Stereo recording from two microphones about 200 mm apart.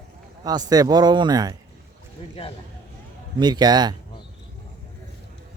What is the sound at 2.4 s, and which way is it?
Speech, 30° left (ahead or behind).